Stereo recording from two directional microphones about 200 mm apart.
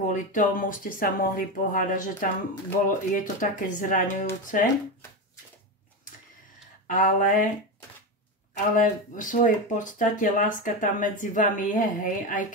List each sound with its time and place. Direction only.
0.0 s speech: 40° left (ahead or behind)
6.9 s speech: 40° left (ahead or behind)
8.7 s speech: 40° left (ahead or behind)